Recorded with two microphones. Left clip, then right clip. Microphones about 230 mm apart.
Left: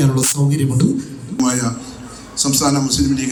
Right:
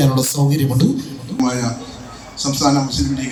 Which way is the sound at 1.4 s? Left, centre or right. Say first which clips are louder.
Left 1 dB; left.